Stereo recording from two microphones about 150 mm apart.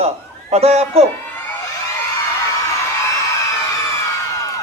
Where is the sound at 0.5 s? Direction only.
45° right (ahead or behind).